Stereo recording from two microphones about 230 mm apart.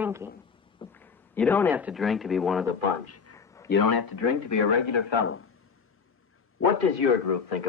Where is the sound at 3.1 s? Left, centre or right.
Left.